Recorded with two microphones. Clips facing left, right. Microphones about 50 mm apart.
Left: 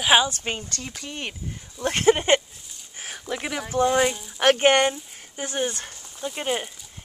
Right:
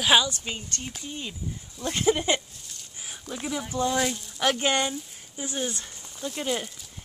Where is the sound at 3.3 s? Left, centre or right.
Left.